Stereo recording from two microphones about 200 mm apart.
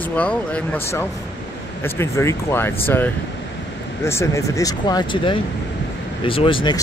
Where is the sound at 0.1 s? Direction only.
5° left (ahead or behind).